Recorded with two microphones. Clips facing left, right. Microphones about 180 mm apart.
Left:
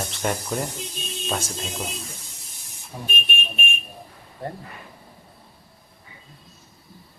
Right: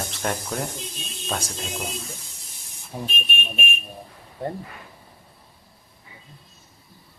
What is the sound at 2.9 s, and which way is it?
Speech, 30° right (ahead or behind).